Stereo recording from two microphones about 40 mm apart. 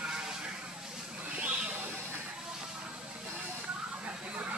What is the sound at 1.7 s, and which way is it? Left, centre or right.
Sheep, right.